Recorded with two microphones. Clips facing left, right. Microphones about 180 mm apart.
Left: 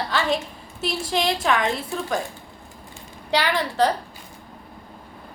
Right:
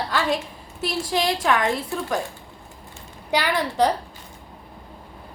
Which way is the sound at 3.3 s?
10° right (ahead or behind).